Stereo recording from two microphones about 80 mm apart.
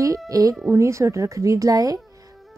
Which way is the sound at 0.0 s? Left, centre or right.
Right.